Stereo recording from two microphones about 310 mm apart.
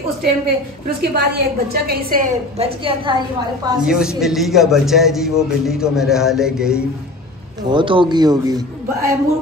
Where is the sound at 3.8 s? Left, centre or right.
Centre.